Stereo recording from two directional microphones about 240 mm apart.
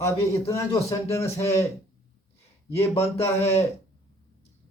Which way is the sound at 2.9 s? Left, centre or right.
Left.